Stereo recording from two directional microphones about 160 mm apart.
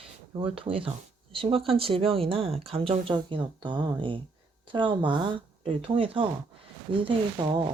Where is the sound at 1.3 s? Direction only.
35° right (ahead or behind).